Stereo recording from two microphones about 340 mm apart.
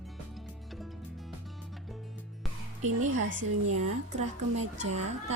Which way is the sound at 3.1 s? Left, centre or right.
Right.